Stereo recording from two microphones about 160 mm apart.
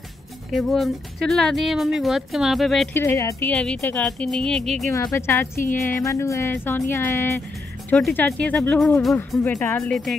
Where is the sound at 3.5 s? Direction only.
5° left (ahead or behind).